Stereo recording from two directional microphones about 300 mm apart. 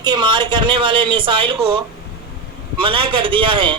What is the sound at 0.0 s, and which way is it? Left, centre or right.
Speech, centre.